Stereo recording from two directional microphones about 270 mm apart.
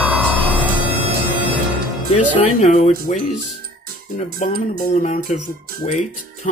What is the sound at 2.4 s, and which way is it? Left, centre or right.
Speech, left.